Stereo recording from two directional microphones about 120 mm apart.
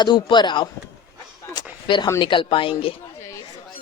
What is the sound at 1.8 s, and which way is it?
A woman's voice, 45° left (ahead or behind).